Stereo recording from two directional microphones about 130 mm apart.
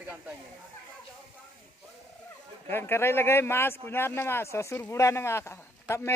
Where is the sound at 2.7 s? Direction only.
20° left (ahead or behind).